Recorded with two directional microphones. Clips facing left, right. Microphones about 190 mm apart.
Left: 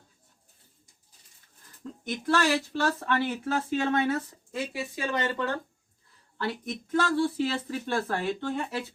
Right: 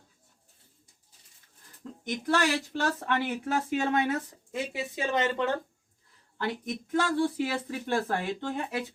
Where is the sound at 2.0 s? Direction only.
20° right (ahead or behind).